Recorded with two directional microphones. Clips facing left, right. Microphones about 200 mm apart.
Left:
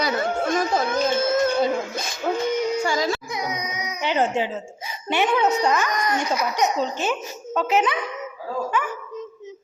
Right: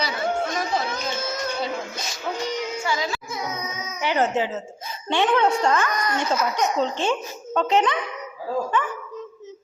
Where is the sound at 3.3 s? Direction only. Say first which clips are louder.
Left 2 dB; 15° left (ahead or behind).